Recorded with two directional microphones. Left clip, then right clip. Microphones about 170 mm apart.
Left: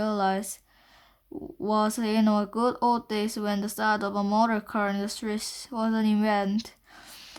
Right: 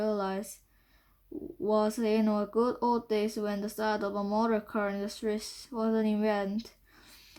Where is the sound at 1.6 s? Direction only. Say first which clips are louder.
Left 2 dB; 30° left (ahead or behind).